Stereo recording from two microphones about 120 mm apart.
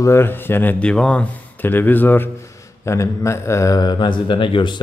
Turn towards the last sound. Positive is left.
turn(degrees=45)  # may be behind; listen again after turning